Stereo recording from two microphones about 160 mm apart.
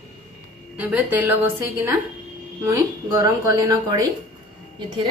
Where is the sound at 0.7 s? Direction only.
10° right (ahead or behind).